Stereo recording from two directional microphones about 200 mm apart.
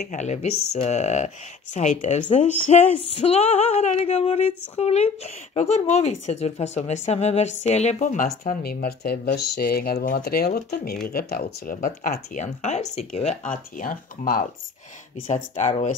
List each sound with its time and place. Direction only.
0.0 s female singing: 35° left (ahead or behind)
8.5 s speech: 50° left (ahead or behind)
15.2 s female singing: 35° left (ahead or behind)